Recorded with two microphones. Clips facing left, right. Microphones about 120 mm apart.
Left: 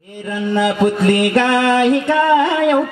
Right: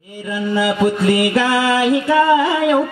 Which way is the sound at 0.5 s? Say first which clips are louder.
Left 1 dB; 5° right (ahead or behind).